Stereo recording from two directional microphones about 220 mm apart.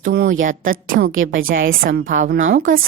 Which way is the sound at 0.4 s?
40° right (ahead or behind).